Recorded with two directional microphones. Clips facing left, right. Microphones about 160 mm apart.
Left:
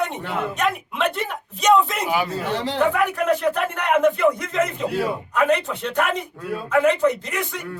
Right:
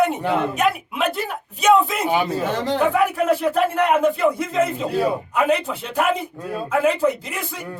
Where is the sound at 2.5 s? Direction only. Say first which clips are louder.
Right 3 dB; 45° right (ahead or behind).